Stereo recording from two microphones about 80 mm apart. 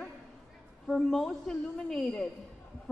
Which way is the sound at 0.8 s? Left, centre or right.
Centre.